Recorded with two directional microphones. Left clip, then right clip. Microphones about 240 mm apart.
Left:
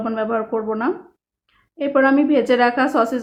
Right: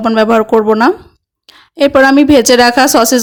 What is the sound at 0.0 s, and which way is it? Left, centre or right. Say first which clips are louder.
Speech: right 12 dB; right.